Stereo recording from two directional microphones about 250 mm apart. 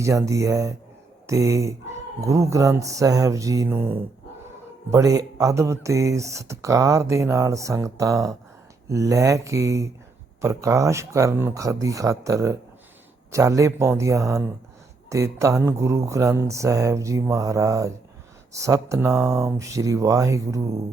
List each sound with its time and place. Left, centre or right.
0.0 s speech: centre